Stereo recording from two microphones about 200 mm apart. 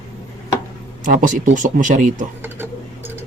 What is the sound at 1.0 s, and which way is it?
Speech, 40° right (ahead or behind).